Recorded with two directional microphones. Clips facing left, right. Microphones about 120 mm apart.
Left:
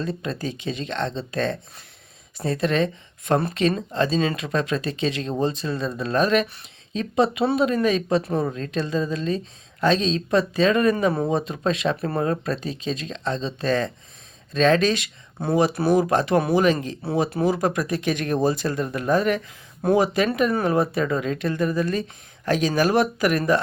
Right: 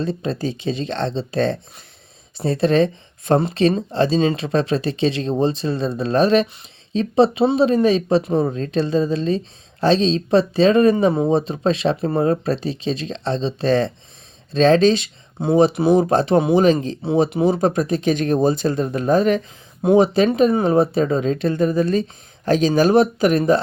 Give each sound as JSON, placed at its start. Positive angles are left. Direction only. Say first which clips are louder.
{"t": 0.0, "sound": "speech", "louder": "right 5 dB", "side_deg": -30}
{"t": 17.1, "sound": "speech", "louder": "right 5 dB", "side_deg": -20}
{"t": 19.8, "sound": "speech", "louder": "right 5 dB", "side_deg": -20}
{"t": 20.1, "sound": "speech", "louder": "right 6 dB", "side_deg": -30}